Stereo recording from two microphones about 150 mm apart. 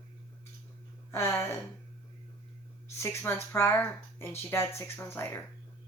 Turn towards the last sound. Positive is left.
turn(degrees=15)  # may be behind; listen again after turning